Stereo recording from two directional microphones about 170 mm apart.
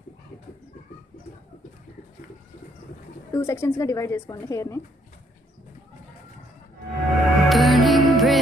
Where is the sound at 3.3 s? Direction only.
15° left (ahead or behind).